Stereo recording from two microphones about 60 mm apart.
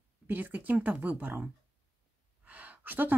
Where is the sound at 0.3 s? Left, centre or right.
Right.